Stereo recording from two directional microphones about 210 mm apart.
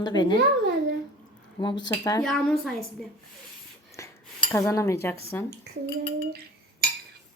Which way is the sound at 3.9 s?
15° left (ahead or behind).